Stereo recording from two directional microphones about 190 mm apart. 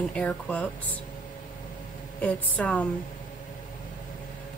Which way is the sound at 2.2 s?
5° left (ahead or behind).